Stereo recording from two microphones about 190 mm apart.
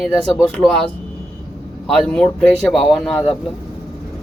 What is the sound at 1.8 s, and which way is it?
Speech, centre (ahead or behind).